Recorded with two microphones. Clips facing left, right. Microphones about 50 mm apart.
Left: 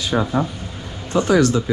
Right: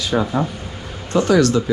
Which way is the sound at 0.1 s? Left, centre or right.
Centre.